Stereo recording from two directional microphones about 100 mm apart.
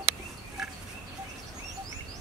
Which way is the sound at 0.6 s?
Centre (ahead or behind).